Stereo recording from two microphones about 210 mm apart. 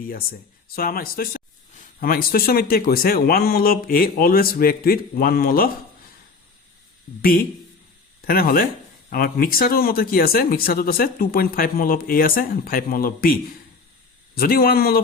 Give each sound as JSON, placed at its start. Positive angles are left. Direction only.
{"t": 0.0, "sound": "speech", "side_deg": 45}
{"t": 8.3, "sound": "speech", "side_deg": 45}